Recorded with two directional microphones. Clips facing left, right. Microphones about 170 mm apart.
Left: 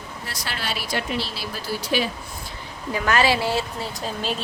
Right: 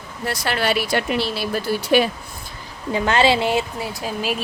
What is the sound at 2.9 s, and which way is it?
Speech, 25° right (ahead or behind).